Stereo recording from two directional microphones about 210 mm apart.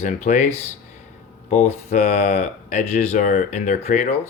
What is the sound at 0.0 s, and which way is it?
Speech, 35° left (ahead or behind).